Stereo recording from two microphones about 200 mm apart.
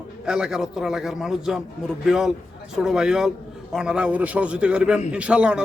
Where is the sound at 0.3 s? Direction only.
5° right (ahead or behind).